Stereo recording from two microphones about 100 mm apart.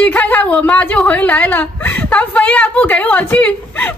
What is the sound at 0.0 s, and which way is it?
A woman's voice, 15° left (ahead or behind).